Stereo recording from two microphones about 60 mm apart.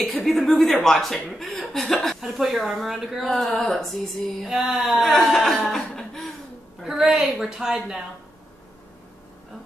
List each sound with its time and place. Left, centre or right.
0.0 s speech: centre
1.4 s chuckle: centre
2.0 s speech: centre
6.8 s a woman's voice: centre